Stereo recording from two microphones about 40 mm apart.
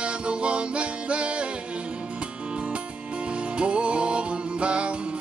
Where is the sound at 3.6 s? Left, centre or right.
Right.